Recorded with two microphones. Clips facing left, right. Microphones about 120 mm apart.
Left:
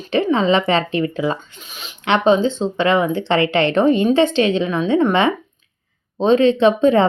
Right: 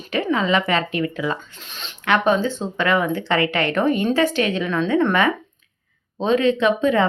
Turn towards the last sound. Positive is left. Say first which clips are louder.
# left 5 dB
turn(degrees=30)  # may be behind; listen again after turning